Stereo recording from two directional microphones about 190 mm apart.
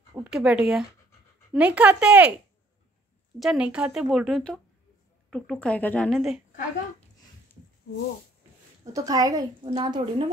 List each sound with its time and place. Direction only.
0.1 s speech: 5° right (ahead or behind)
3.3 s speech: 5° right (ahead or behind)
8.9 s a woman's voice: 20° right (ahead or behind)